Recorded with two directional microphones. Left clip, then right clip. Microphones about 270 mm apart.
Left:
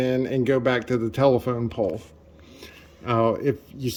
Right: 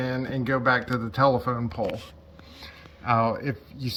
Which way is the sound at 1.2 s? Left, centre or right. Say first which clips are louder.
Left 2 dB; left.